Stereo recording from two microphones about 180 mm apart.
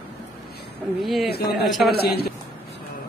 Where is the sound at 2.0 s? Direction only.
60° left (ahead or behind).